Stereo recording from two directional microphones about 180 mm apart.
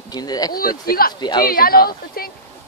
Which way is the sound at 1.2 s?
25° left (ahead or behind).